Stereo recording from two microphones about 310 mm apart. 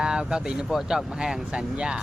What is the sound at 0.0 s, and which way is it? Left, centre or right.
Speech, centre.